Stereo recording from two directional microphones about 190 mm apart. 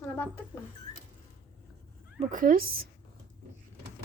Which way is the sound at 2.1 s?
45° right (ahead or behind).